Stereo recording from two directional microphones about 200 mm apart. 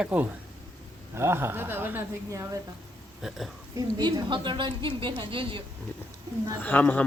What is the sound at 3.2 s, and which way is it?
Speech, centre (ahead or behind).